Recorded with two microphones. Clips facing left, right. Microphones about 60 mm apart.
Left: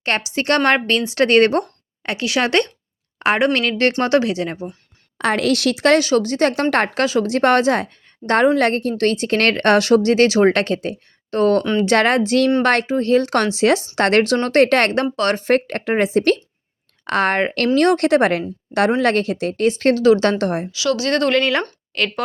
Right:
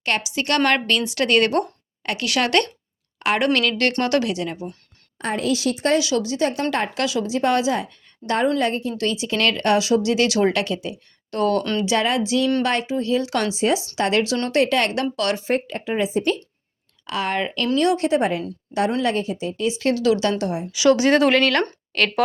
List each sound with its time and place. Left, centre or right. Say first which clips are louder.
0.0 s speech: left 3 dB; left
5.1 s a woman's voice: left 5 dB; left
6.0 s a woman's voice: left 5 dB; left
8.2 s a woman's voice: left 5 dB; centre
8.5 s speech: left 5 dB; left
11.8 s speech: left 5 dB; left
13.6 s a woman's voice: left 5 dB; left
13.9 s speech: left 5 dB; left
15.1 s speech: left 4 dB; left
15.4 s a woman's voice: left 5 dB; left
17.1 s a woman's voice: left 6 dB; left
20.4 s a woman's voice: left 4 dB; left
20.7 s speech: right 9 dB; right
21.1 s speech: right 1 dB; centre